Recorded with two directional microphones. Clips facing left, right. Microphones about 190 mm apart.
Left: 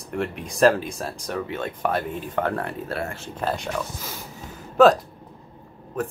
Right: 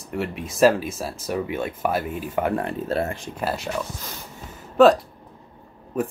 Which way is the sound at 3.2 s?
10° right (ahead or behind).